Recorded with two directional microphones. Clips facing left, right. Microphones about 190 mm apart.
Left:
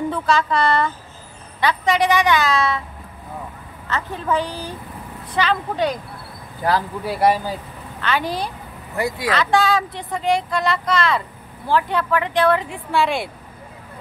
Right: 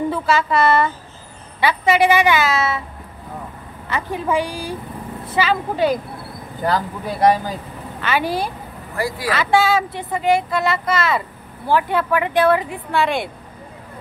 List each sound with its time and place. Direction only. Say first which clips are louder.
0.1 s speech: right 1 dB; 5° right (ahead or behind)
3.8 s speech: right 3 dB; 10° right (ahead or behind)
7.1 s speech: right 2 dB; 10° left (ahead or behind)
8.0 s speech: right 2 dB; 5° right (ahead or behind)
8.9 s speech: left 1 dB; 20° left (ahead or behind)
9.3 s speech: right 2 dB; 5° right (ahead or behind)